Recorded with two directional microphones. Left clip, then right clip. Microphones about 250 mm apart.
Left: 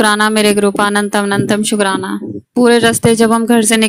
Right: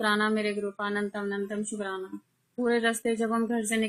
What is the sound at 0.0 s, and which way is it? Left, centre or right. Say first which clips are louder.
Speech: left 15 dB; left.